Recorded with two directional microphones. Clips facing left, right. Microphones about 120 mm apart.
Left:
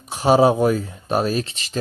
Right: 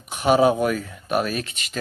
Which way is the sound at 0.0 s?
30° left (ahead or behind).